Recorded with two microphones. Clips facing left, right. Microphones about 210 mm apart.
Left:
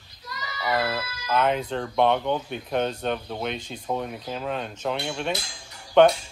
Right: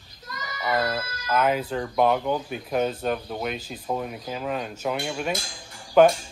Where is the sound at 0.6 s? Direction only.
5° left (ahead or behind).